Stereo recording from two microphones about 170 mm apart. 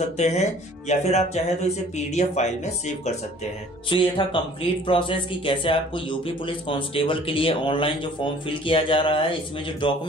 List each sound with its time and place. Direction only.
0.2 s speech: 40° left (ahead or behind)
3.9 s speech: 30° left (ahead or behind)